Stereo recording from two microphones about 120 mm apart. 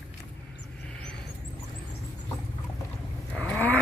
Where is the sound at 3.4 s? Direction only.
15° left (ahead or behind).